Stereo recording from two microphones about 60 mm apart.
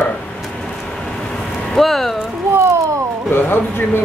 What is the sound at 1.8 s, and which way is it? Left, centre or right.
Speech, centre.